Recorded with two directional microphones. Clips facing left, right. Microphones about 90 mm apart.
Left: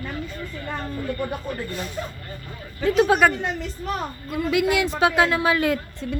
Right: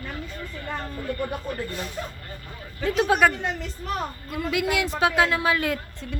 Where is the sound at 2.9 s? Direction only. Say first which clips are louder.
Left 2 dB; 30° left (ahead or behind).